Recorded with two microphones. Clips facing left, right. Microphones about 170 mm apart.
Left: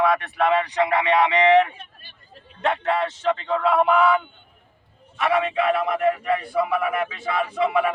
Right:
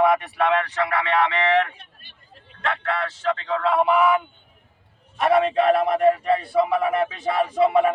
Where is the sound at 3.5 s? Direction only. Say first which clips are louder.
Even; 5° left (ahead or behind).